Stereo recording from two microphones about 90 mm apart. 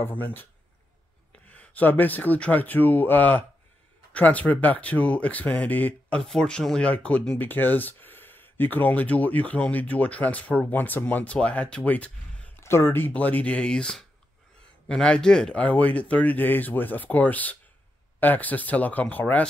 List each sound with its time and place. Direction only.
0.0 s speech: 20° left (ahead or behind)
12.5 s speech: 25° left (ahead or behind)